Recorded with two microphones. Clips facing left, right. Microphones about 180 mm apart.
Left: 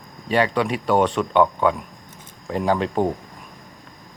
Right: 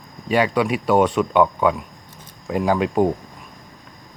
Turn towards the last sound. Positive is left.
turn(degrees=-10)  # may be behind; listen again after turning